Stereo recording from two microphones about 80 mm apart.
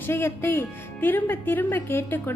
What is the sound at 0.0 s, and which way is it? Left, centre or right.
A woman's voice, left.